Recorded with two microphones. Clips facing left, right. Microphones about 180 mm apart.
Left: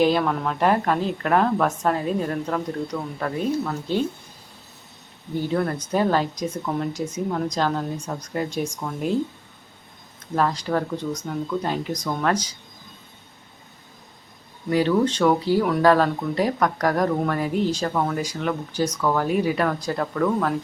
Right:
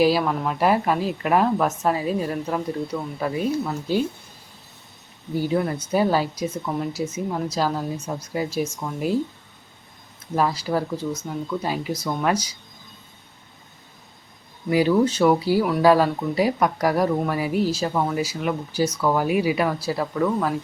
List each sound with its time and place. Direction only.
0.0 s a woman's voice: 5° right (ahead or behind)
5.3 s a woman's voice: 10° right (ahead or behind)
10.3 s speech: 10° right (ahead or behind)
14.7 s speech: 10° right (ahead or behind)